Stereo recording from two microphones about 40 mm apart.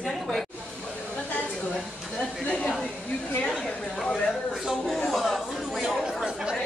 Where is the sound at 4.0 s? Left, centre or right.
Centre.